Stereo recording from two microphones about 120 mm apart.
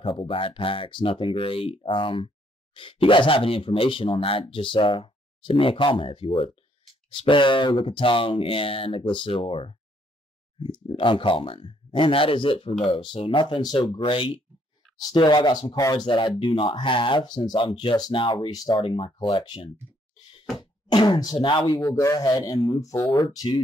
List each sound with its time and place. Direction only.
0.0 s speech: 45° left (ahead or behind)
18.5 s speech: 35° left (ahead or behind)
21.8 s speech: 25° left (ahead or behind)
23.0 s speech: 40° left (ahead or behind)